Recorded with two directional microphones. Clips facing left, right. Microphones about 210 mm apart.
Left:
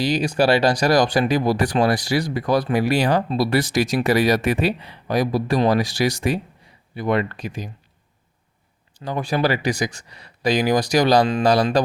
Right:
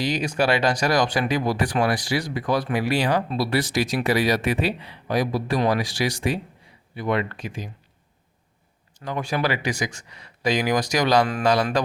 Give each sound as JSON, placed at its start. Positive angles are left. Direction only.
{"t": 0.0, "sound": "speech", "side_deg": 35}
{"t": 9.0, "sound": "speech", "side_deg": 35}